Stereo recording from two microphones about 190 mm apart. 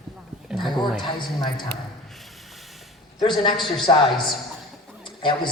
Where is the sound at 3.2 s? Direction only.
25° left (ahead or behind).